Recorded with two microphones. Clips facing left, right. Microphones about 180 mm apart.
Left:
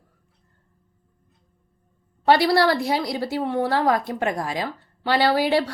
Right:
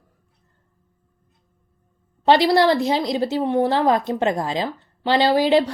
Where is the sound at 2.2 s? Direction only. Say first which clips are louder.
Right 2 dB; 20° right (ahead or behind).